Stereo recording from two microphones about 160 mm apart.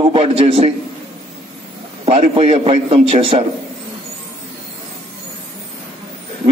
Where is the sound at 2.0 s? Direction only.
35° right (ahead or behind).